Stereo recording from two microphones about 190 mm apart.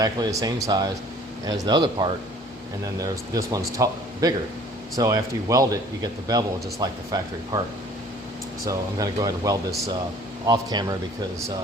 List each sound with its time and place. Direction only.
0.0 s a man's voice: 20° right (ahead or behind)
8.6 s a man's voice: 20° right (ahead or behind)